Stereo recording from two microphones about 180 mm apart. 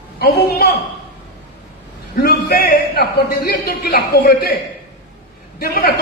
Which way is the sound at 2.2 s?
60° left (ahead or behind).